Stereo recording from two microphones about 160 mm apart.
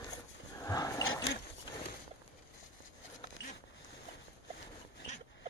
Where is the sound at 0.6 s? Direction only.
20° left (ahead or behind).